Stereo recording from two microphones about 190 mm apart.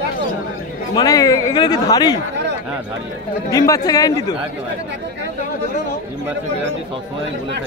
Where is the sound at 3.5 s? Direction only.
20° left (ahead or behind).